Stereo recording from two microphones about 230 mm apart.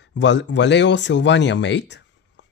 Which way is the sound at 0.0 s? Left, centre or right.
Left.